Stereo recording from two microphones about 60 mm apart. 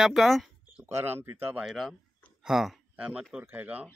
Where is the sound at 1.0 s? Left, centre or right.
Right.